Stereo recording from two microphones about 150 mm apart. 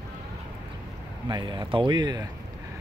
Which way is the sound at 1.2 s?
30° right (ahead or behind).